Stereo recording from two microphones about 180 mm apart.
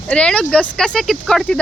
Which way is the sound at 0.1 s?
5° left (ahead or behind).